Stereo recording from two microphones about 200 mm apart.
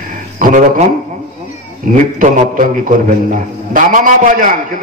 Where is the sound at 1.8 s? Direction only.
40° right (ahead or behind).